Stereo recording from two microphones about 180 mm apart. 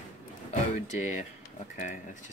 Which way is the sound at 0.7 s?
40° left (ahead or behind).